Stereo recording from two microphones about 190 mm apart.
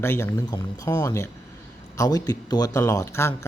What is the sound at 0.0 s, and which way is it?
Speech, 15° left (ahead or behind).